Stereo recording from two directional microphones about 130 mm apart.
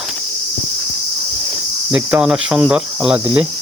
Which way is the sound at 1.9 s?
10° right (ahead or behind).